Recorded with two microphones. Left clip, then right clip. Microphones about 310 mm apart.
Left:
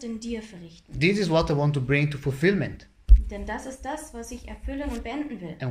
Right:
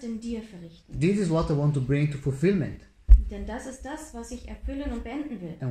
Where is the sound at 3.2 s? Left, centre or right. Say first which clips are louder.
Left 4 dB; centre.